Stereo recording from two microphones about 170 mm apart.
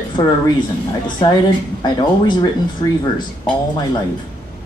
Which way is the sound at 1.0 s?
25° left (ahead or behind).